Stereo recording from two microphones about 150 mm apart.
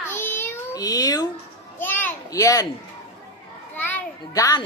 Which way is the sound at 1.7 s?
15° left (ahead or behind).